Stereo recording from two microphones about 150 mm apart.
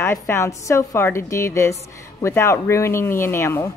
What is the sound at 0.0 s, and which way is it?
A woman's voice, 15° left (ahead or behind).